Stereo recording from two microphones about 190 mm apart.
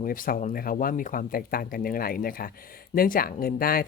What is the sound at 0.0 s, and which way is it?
Speech, 45° left (ahead or behind).